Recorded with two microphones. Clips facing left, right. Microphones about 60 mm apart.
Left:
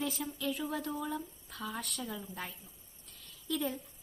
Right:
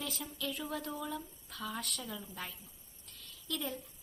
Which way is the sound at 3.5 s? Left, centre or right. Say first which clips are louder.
Left 4 dB; centre.